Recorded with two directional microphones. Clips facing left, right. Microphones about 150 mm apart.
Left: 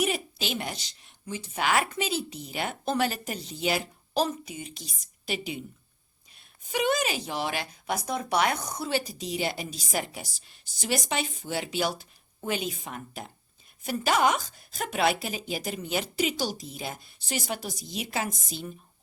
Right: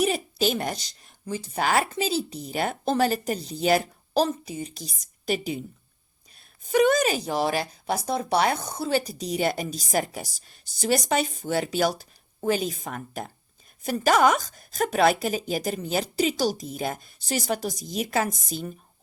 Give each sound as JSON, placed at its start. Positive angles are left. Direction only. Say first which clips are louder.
{"t": 0.0, "sound": "a woman's voice", "louder": "right 5 dB", "side_deg": -40}